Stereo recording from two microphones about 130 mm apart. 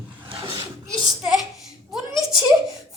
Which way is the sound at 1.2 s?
5° right (ahead or behind).